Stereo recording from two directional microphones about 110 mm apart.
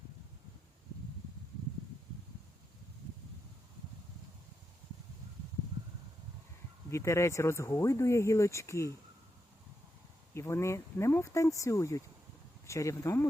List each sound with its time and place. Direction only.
6.9 s speech: 25° left (ahead or behind)
10.3 s speech: 25° left (ahead or behind)